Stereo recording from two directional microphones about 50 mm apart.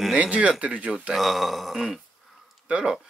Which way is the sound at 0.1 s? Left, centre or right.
Right.